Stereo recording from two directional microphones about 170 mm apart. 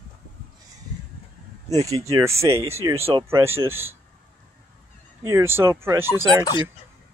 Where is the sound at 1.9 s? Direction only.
20° right (ahead or behind).